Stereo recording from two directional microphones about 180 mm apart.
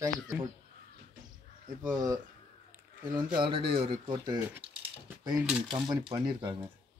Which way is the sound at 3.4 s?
30° right (ahead or behind).